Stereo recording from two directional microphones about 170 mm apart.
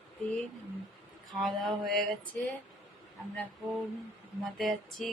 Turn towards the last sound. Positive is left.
turn(degrees=0)  # may be behind; listen again after turning